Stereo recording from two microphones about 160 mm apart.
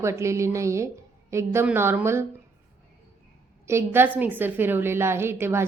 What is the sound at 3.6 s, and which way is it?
A woman's voice, 15° right (ahead or behind).